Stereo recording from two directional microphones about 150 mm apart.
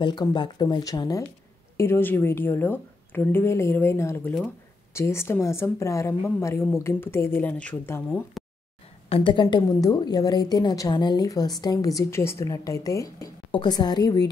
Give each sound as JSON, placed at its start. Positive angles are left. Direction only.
{"t": 0.0, "sound": "a woman's voice", "side_deg": 30}
{"t": 1.8, "sound": "a woman's voice", "side_deg": 15}
{"t": 8.4, "sound": "a sound", "side_deg": 0}
{"t": 9.1, "sound": "a woman's voice", "side_deg": 35}